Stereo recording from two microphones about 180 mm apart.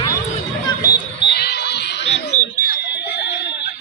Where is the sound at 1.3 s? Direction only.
65° left (ahead or behind).